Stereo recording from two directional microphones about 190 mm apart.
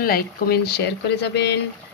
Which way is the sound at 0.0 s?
55° left (ahead or behind).